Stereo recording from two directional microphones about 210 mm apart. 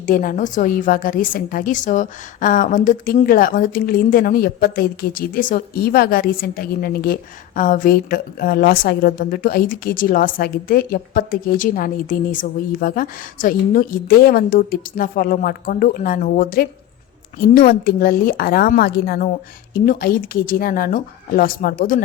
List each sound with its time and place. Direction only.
0.0 s a woman's voice: 40° left (ahead or behind)